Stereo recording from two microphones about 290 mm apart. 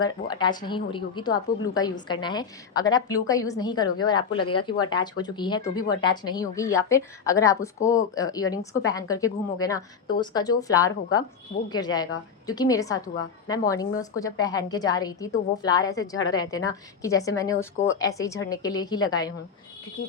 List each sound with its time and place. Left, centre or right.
0.0 s speech: centre